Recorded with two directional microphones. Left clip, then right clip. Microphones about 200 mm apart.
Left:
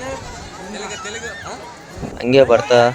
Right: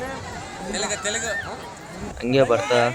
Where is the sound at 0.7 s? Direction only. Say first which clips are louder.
Right 3 dB; 60° right (ahead or behind).